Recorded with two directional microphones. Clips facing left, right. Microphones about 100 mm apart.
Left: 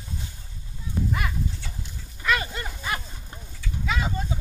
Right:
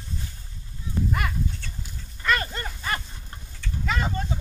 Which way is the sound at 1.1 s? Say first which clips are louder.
Right 1 dB; centre (ahead or behind).